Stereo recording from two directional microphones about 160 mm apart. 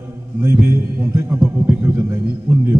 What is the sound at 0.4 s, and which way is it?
A man's voice, 15° right (ahead or behind).